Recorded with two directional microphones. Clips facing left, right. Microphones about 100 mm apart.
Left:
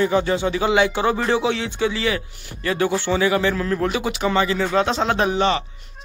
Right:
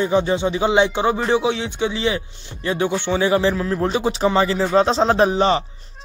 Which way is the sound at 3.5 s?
15° right (ahead or behind).